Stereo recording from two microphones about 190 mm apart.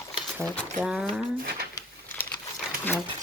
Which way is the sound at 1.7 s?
10° left (ahead or behind).